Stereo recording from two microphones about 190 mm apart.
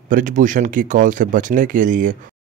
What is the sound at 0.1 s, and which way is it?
Speech, 40° right (ahead or behind).